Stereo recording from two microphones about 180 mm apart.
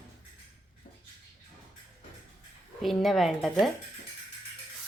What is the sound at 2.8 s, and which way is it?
Speech, centre (ahead or behind).